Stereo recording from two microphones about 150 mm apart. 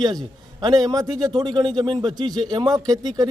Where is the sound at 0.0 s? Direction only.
25° right (ahead or behind).